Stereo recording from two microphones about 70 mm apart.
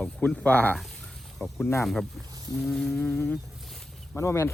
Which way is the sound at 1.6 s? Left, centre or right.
Left.